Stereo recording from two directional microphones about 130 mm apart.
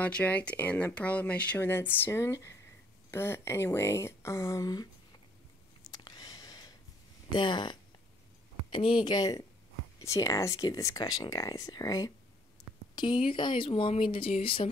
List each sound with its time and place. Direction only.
0.0 s speech: 10° left (ahead or behind); by 4.8 s 30° left (ahead or behind)
5.9 s a sound: 30° left (ahead or behind)
7.3 s speech: 35° left (ahead or behind)
8.7 s speech: 40° left (ahead or behind)
12.9 s speech: 40° left (ahead or behind)